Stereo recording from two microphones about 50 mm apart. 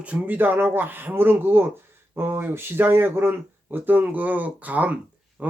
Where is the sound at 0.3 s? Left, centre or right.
Right.